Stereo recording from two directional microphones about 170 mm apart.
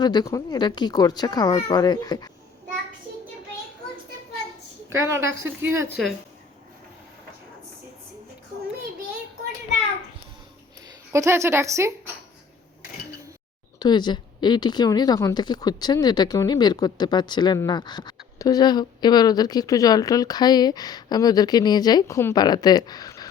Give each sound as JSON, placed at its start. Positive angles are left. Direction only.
{"t": 0.0, "sound": "speech", "side_deg": 25}
{"t": 4.9, "sound": "a woman's voice", "side_deg": -15}
{"t": 11.1, "sound": "a woman's voice", "side_deg": -15}
{"t": 13.7, "sound": "speech", "side_deg": 25}